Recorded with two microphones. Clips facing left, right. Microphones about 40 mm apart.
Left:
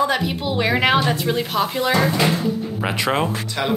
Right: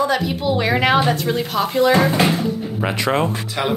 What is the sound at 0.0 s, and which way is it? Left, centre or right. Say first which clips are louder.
A woman's voice: right 1 dB; centre.